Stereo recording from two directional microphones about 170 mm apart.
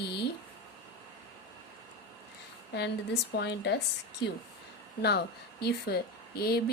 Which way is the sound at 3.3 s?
90° left.